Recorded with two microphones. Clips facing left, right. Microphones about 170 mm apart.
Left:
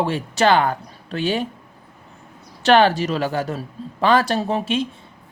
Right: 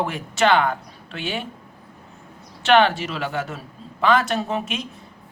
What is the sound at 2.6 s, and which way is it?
Speech, 35° left (ahead or behind).